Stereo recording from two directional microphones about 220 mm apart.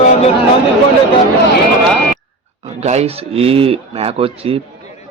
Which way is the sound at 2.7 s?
30° right (ahead or behind).